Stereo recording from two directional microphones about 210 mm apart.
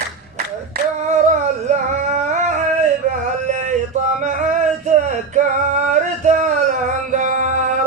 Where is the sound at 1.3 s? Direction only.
35° right (ahead or behind).